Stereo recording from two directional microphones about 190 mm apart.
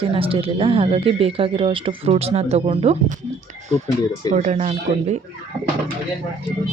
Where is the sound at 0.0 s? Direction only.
30° right (ahead or behind).